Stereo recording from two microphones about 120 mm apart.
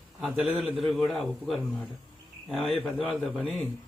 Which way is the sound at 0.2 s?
5° right (ahead or behind).